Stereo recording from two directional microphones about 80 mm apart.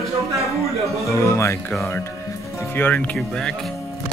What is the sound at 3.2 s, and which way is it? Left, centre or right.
Speech, centre.